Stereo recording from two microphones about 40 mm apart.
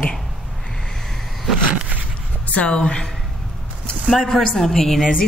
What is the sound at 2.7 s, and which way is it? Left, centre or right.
Speech, left.